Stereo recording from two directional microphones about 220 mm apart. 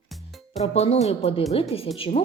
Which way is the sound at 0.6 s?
30° left (ahead or behind).